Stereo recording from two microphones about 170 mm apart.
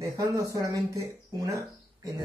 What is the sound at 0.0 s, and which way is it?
Speech, 20° right (ahead or behind).